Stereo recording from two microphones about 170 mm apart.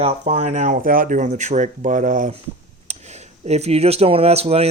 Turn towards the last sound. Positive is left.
turn(degrees=-35)  # may be behind; listen again after turning